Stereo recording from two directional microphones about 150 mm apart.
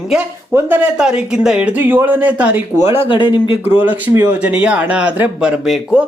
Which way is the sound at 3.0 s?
35° left (ahead or behind).